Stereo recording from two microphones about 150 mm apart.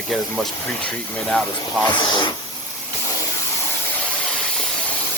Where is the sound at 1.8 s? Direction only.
30° left (ahead or behind).